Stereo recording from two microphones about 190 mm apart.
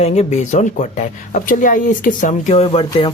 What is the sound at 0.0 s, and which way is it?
Speech, 35° left (ahead or behind).